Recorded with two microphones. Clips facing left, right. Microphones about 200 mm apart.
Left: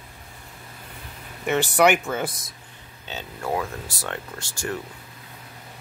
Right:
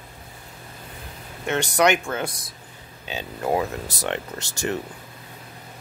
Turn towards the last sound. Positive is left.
turn(degrees=-20)  # may be behind; listen again after turning